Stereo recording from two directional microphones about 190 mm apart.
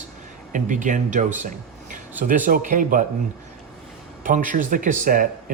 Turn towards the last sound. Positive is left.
turn(degrees=-45)  # may be behind; listen again after turning